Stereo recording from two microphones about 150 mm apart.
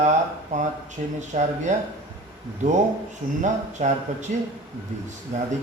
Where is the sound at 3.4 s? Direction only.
50° right (ahead or behind).